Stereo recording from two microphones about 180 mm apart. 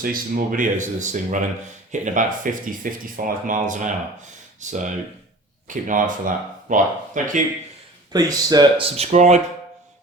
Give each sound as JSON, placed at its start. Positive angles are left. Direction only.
{"t": 0.0, "sound": "speech", "side_deg": -50}
{"t": 8.1, "sound": "speech", "side_deg": -20}
{"t": 9.0, "sound": "speech", "side_deg": -40}